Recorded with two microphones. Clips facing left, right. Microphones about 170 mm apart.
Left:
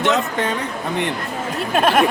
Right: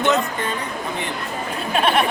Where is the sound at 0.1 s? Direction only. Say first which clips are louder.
Left 1 dB; 80° left.